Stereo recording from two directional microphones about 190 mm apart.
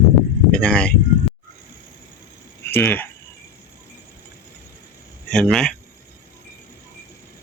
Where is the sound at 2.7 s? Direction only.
10° left (ahead or behind).